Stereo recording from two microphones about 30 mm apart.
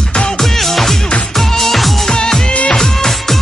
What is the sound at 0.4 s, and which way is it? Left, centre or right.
Music, centre.